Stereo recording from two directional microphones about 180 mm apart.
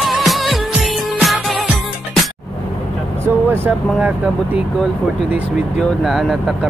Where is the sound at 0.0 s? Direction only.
Centre (ahead or behind).